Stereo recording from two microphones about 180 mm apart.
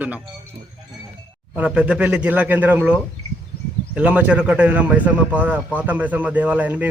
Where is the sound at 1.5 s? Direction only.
5° right (ahead or behind).